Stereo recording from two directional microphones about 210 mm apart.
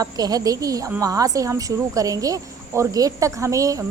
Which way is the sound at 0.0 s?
20° right (ahead or behind).